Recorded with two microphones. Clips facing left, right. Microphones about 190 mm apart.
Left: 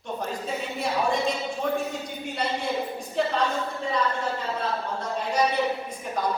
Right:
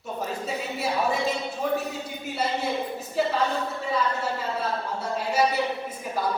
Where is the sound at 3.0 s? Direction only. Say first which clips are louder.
Right 1 dB; 5° right (ahead or behind).